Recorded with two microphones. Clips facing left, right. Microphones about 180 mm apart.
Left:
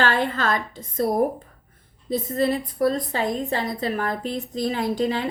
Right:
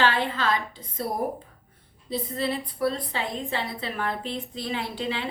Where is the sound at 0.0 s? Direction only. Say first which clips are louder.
Left 2 dB; 45° left (ahead or behind).